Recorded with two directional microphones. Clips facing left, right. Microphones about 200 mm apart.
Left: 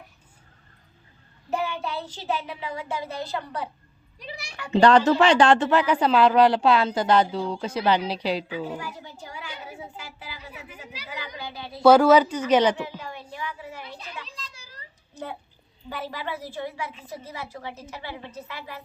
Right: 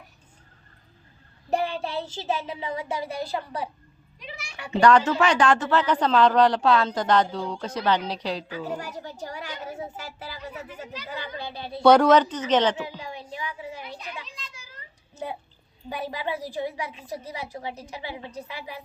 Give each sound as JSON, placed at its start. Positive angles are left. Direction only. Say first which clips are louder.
{"t": 1.5, "sound": "child singing", "louder": "right 2 dB", "side_deg": -30}
{"t": 4.2, "sound": "a sound", "louder": "left 2 dB", "side_deg": 35}
{"t": 4.7, "sound": "speech", "louder": "left 2 dB", "side_deg": 30}
{"t": 5.7, "sound": "a woman's voice", "louder": "left 1 dB", "side_deg": 10}
{"t": 8.8, "sound": "a sound", "louder": "right 3 dB", "side_deg": -40}
{"t": 11.4, "sound": "speech", "louder": "right 2 dB", "side_deg": -30}
{"t": 11.8, "sound": "a woman's voice", "louder": "left 1 dB", "side_deg": 5}
{"t": 13.0, "sound": "a sound", "louder": "right 1 dB", "side_deg": -15}
{"t": 14.3, "sound": "children playing", "louder": "left 1 dB", "side_deg": 35}
{"t": 15.9, "sound": "a woman's voice", "louder": "right 2 dB", "side_deg": -15}